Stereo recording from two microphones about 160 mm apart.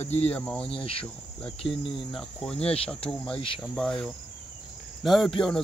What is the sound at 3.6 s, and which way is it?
Speech, 5° left (ahead or behind).